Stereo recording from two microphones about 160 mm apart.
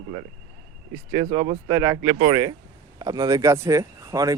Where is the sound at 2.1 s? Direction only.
30° right (ahead or behind).